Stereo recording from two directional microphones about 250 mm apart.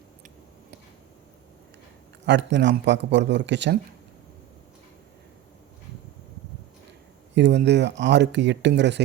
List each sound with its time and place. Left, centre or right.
2.2 s speech: right
7.3 s speech: right